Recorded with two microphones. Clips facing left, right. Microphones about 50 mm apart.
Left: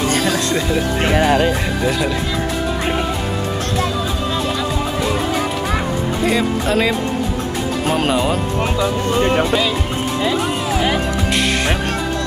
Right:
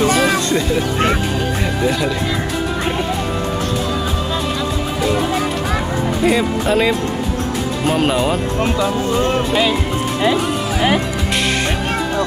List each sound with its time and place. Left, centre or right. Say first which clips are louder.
0.5 s speech: right 1 dB; centre
1.1 s speech: left 6 dB; left
6.2 s speech: right 2 dB; centre